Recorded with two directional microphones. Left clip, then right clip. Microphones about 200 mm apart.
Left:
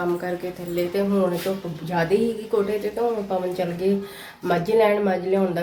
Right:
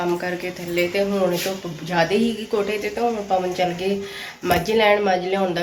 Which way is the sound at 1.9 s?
Centre (ahead or behind).